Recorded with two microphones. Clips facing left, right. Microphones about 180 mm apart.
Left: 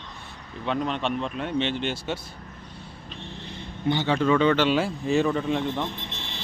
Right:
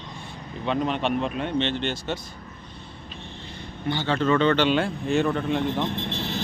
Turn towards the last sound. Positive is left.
turn(degrees=-40)  # may be behind; listen again after turning